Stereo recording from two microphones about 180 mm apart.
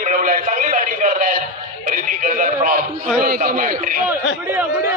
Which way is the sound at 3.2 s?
55° right (ahead or behind).